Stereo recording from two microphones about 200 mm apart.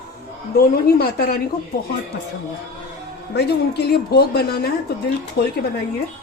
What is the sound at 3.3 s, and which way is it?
A woman's voice, 55° left (ahead or behind).